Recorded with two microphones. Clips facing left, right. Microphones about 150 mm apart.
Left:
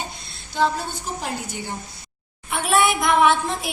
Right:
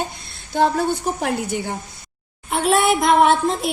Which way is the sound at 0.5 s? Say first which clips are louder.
Right 5 dB; 50° right (ahead or behind).